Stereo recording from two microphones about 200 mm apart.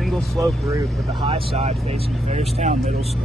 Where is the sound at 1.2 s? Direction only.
30° right (ahead or behind).